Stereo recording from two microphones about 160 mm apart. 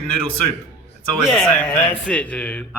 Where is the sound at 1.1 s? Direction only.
Centre (ahead or behind).